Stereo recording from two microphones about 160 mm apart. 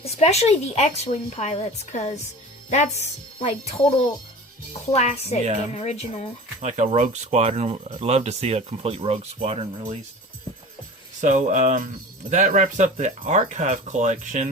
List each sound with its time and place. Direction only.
0.0 s speech: 40° left (ahead or behind)
6.6 s speech: 45° right (ahead or behind)
11.2 s speech: 50° right (ahead or behind)